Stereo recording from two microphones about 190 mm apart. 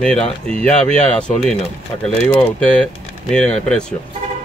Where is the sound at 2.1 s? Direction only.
30° left (ahead or behind).